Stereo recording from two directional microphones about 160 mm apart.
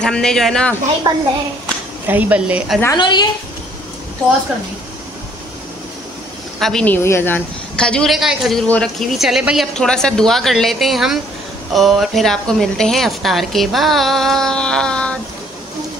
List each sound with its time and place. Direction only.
0.0 s a woman's voice: 5° left (ahead or behind)
1.1 s a child's voice: 20° right (ahead or behind)
2.0 s a woman's voice: 10° right (ahead or behind)
3.0 s a woman's voice: 25° left (ahead or behind)
6.6 s a woman's voice: 5° left (ahead or behind)